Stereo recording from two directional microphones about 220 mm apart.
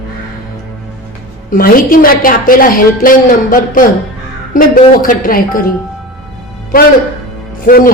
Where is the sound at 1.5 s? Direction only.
40° left (ahead or behind).